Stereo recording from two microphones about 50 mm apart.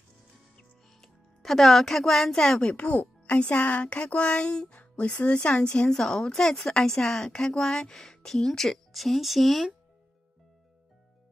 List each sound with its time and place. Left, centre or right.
1.0 s a woman's voice: centre
2.6 s speech: left
5.5 s a woman's voice: centre